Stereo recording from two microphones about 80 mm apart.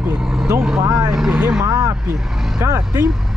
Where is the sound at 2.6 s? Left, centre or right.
Right.